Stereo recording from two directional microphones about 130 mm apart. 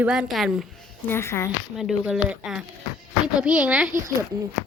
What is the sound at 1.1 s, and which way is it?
Speech, 20° left (ahead or behind).